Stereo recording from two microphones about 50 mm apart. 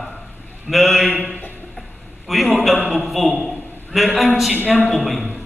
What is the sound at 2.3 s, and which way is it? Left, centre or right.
A man's voice, centre.